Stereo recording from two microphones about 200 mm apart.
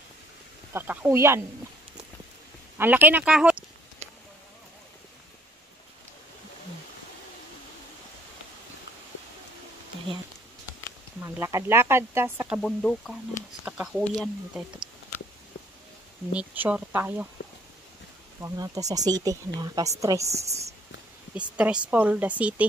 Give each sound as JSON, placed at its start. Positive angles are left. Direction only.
{"t": 0.7, "sound": "speech", "side_deg": -10}
{"t": 2.8, "sound": "speech", "side_deg": -10}
{"t": 11.1, "sound": "speech", "side_deg": -10}
{"t": 12.5, "sound": "speech", "side_deg": 5}
{"t": 16.3, "sound": "speech", "side_deg": -10}
{"t": 18.4, "sound": "speech", "side_deg": -15}
{"t": 20.4, "sound": "speech", "side_deg": -35}
{"t": 21.4, "sound": "speech", "side_deg": -5}